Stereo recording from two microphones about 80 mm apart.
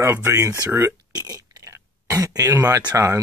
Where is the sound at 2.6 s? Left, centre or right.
Right.